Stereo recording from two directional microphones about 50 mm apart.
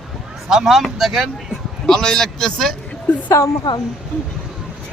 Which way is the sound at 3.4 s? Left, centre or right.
Left.